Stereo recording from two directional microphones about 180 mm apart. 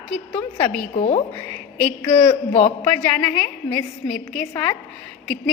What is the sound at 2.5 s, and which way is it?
Speech, 35° left (ahead or behind).